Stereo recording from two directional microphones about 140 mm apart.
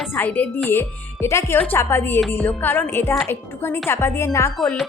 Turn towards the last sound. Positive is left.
turn(degrees=20)  # may be behind; listen again after turning